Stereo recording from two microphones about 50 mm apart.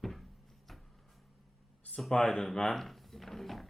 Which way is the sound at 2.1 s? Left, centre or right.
Centre.